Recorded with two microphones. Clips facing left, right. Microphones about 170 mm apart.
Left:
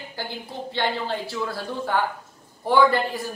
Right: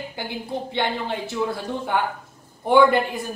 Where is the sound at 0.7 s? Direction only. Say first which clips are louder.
Left 1 dB; 20° right (ahead or behind).